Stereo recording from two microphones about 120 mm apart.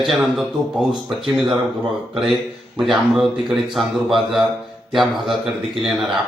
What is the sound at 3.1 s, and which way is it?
Speech, centre (ahead or behind).